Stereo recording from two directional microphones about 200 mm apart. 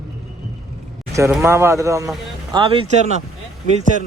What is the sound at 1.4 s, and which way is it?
Speech, 15° right (ahead or behind).